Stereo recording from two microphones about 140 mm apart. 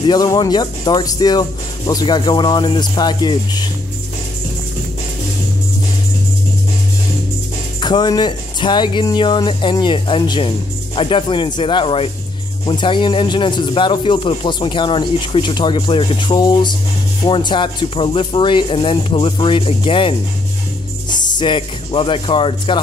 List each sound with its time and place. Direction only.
0.0 s speech: 30° left (ahead or behind)
7.8 s speech: 30° left (ahead or behind)